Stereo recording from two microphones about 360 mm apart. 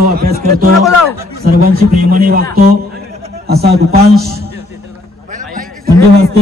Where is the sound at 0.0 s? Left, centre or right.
Right.